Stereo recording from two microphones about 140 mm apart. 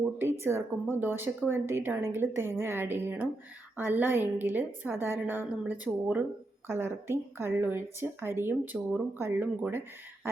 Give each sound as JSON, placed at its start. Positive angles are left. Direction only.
{"t": 0.2, "sound": "speech", "side_deg": -20}